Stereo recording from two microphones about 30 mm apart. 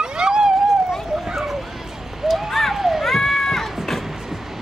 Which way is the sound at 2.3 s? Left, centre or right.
Centre.